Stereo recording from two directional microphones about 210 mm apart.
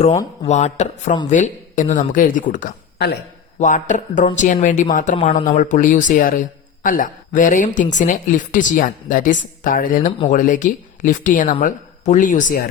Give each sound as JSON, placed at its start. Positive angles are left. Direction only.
{"t": 0.4, "sound": "speech", "side_deg": 35}